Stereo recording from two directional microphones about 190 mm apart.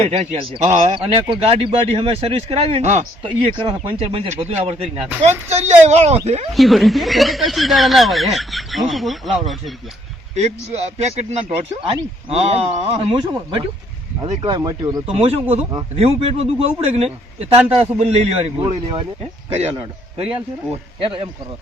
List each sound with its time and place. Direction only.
0.0 s speech: 30° right (ahead or behind)
6.5 s speech: centre (ahead or behind)
10.3 s a man's voice: 35° right (ahead or behind); by 15.0 s 20° right (ahead or behind)
15.0 s a man's voice: 30° right (ahead or behind)